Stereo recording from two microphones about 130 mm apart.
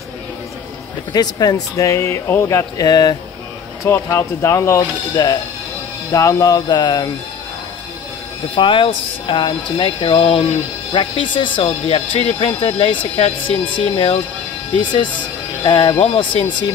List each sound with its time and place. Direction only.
1.1 s speech: 30° left (ahead or behind)
8.5 s speech: 40° left (ahead or behind)